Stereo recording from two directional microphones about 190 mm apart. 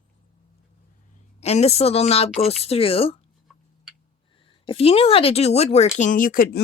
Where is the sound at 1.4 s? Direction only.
35° left (ahead or behind).